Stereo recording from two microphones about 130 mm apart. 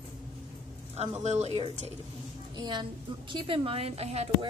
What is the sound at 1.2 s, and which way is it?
Speech, 60° right (ahead or behind).